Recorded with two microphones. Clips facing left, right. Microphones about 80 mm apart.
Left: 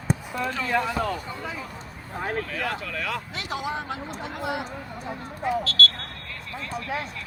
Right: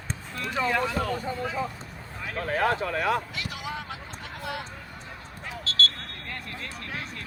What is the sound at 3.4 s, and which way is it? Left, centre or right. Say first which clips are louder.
Speech: left 5 dB; left.